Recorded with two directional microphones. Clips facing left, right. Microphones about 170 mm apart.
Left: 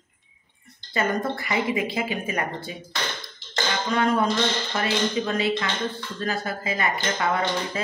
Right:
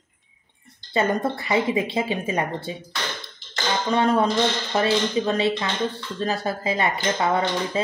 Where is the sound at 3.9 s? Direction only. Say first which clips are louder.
Right 3 dB; 30° right (ahead or behind).